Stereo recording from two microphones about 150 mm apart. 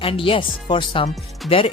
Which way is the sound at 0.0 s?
35° left (ahead or behind).